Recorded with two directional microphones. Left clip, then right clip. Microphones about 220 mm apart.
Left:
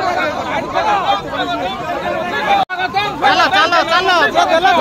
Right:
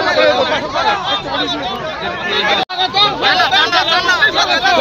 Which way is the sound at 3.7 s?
45° left (ahead or behind).